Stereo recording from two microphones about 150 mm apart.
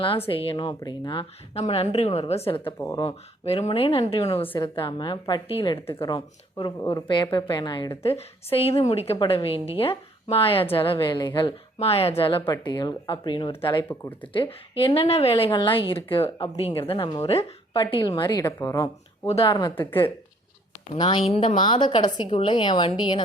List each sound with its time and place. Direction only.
0.3 s a woman's voice: 35° left (ahead or behind)
2.7 s a woman's voice: 20° left (ahead or behind)
3.0 s a woman's voice: 40° left (ahead or behind); by 19.3 s 20° left (ahead or behind)
19.3 s a woman's voice: 40° left (ahead or behind)
19.7 s speech: 15° left (ahead or behind)
21.2 s a woman's voice: 35° left (ahead or behind)